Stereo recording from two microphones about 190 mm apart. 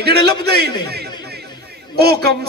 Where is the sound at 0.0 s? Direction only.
55° right (ahead or behind).